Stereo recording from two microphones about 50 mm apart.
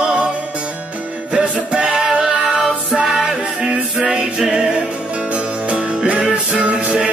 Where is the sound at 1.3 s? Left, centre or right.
Centre.